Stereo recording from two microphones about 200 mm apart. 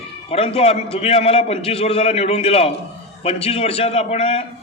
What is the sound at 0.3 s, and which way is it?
A man's voice, 30° left (ahead or behind).